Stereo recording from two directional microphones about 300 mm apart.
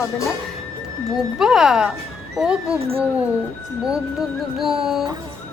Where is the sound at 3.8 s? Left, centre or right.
Centre.